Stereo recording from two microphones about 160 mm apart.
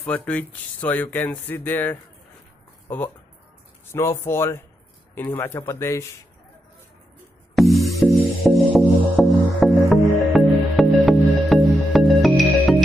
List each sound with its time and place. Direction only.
0.0 s speech: 10° left (ahead or behind)
3.8 s speech: 15° left (ahead or behind)
7.5 s music: centre (ahead or behind)